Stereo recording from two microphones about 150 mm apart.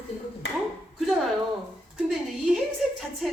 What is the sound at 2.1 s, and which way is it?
Speech, 5° right (ahead or behind).